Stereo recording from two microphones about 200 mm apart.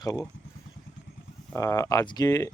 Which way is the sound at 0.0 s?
20° left (ahead or behind).